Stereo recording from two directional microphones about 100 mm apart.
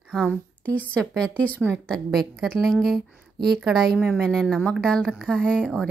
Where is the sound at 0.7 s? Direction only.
15° left (ahead or behind).